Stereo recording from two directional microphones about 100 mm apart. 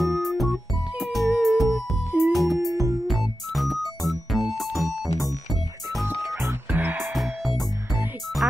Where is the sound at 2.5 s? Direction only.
30° right (ahead or behind).